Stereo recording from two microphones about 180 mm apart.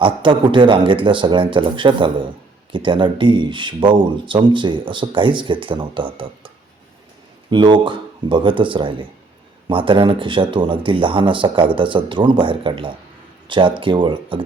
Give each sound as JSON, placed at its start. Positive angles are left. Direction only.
{"t": 0.0, "sound": "speech", "side_deg": -25}
{"t": 7.5, "sound": "speech", "side_deg": -25}